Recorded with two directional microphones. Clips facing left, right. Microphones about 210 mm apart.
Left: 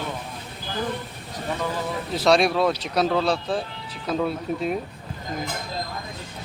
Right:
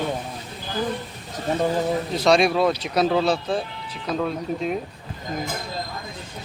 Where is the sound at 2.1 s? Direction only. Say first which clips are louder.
Even; centre (ahead or behind).